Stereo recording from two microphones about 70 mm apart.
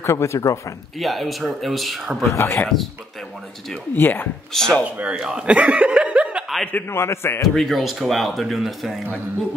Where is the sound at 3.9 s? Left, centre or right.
Left.